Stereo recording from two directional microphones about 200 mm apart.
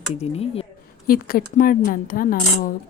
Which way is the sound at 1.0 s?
45° left (ahead or behind).